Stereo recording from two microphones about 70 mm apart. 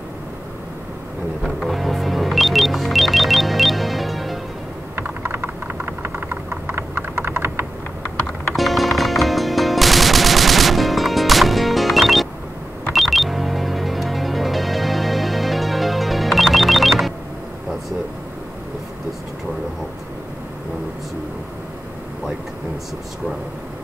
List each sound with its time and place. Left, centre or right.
1.4 s music: centre
4.9 s a sound: right
8.5 s machine gun: centre
12.9 s music: centre